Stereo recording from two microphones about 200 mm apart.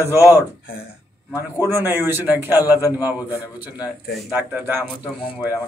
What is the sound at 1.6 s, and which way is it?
Speech, 10° right (ahead or behind).